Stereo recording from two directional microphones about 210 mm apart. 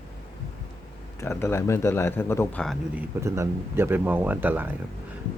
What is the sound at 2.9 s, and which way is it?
Speech, 15° right (ahead or behind).